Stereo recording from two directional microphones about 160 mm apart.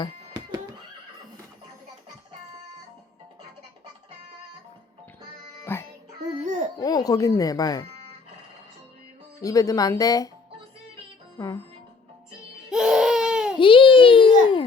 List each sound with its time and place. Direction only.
5.7 s music: 15° left (ahead or behind)
6.4 s a sound: 50° right (ahead or behind)
6.7 s speech: 25° left (ahead or behind)
9.4 s speech: 20° left (ahead or behind)
11.3 s speech: 25° left (ahead or behind)
12.7 s baby cry: 5° right (ahead or behind)
13.6 s a sound: 30° left (ahead or behind)